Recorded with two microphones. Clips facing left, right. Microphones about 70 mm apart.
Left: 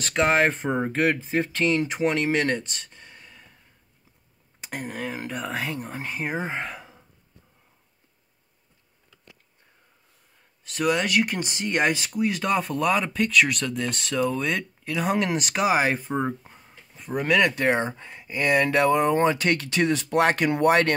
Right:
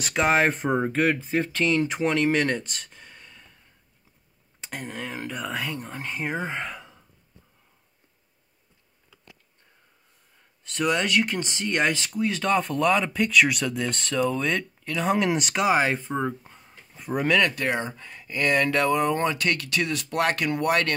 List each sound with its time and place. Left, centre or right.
0.0 s speech: centre
4.6 s speech: centre
10.6 s speech: centre
16.2 s a sound: centre
17.6 s speech: left